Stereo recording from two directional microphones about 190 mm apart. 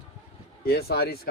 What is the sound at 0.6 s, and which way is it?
Speech, 55° left (ahead or behind).